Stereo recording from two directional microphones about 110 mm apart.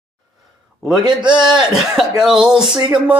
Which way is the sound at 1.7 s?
5° right (ahead or behind).